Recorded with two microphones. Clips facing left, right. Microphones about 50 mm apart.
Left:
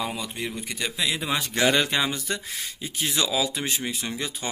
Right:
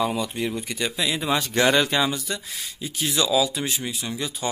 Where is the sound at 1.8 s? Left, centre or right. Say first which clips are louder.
Right 3 dB; centre.